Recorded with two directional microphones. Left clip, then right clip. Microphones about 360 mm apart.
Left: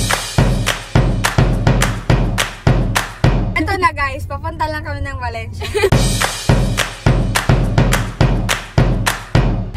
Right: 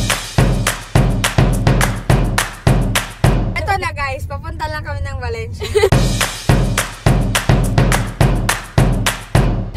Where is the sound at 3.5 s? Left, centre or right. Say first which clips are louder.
Left 3 dB; centre.